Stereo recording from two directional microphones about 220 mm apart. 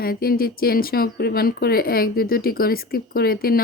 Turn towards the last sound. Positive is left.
turn(degrees=45)  # may be behind; listen again after turning